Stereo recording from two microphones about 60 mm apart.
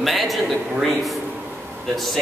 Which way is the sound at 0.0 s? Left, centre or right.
Centre.